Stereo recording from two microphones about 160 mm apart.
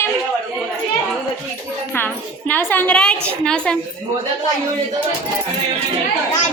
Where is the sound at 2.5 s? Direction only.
10° left (ahead or behind).